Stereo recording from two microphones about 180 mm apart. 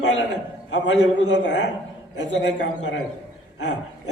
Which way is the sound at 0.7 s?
80° left.